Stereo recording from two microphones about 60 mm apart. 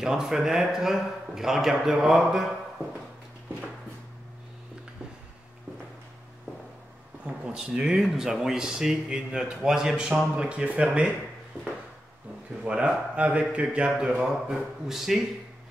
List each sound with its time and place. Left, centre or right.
0.0 s speech: centre
7.2 s speech: centre
12.6 s speech: centre